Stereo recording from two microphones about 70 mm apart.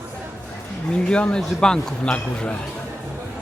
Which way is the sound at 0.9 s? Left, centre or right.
Centre.